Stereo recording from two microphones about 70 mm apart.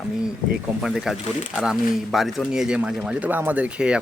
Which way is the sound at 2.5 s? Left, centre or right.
Centre.